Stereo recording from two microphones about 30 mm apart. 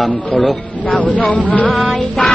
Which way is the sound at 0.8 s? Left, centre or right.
Left.